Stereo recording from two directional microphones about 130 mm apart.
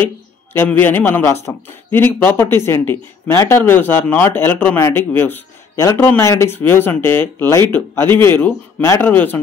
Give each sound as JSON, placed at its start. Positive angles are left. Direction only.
{"t": 0.0, "sound": "speech", "side_deg": 15}